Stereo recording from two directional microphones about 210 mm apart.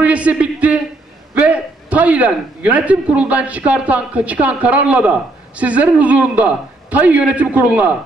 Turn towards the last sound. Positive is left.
turn(degrees=-5)  # may be behind; listen again after turning